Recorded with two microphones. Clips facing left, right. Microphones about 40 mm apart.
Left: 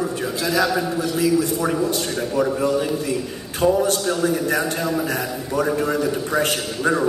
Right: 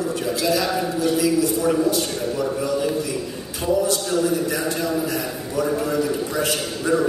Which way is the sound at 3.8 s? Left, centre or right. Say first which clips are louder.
Left 1 dB; left.